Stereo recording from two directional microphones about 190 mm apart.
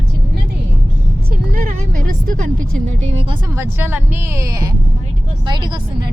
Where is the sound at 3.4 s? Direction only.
15° right (ahead or behind).